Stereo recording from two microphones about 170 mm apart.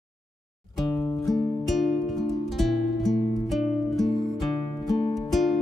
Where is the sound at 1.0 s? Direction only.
20° left (ahead or behind).